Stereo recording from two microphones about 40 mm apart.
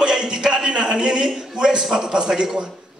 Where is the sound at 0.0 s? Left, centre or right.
Centre.